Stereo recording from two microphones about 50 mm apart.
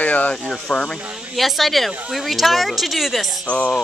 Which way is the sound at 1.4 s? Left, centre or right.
Centre.